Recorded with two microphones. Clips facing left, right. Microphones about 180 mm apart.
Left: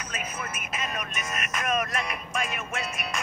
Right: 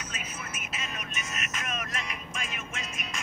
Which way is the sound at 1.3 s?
60° left (ahead or behind).